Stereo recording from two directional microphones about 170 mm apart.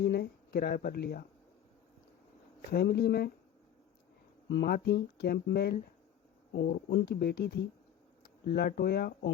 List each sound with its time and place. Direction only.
0.0 s speech: 70° left (ahead or behind)
2.6 s speech: 65° left (ahead or behind)
4.4 s speech: 80° left